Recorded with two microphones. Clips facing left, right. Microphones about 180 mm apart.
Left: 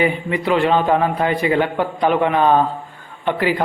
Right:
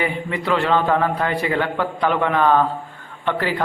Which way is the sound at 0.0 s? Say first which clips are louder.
Left 5 dB; 15° left (ahead or behind).